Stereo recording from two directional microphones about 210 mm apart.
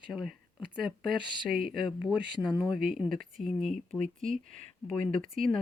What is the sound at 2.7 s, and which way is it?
Speech, 45° right (ahead or behind).